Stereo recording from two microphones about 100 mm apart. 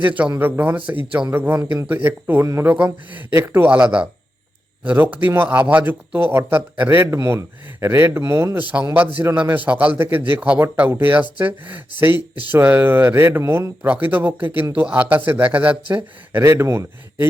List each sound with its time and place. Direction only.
0.3 s a man's voice: 20° right (ahead or behind)
8.8 s a man's voice: 20° right (ahead or behind)
16.4 s a man's voice: 30° right (ahead or behind)